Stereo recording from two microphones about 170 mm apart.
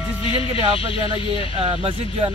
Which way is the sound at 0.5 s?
35° left (ahead or behind).